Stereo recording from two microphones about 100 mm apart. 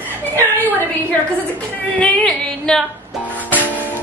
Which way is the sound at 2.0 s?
5° left (ahead or behind).